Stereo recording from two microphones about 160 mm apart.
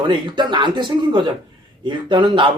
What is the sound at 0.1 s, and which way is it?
Speech, 30° right (ahead or behind).